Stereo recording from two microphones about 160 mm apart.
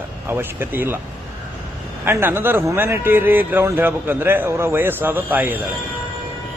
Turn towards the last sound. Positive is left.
turn(degrees=-10)  # may be behind; listen again after turning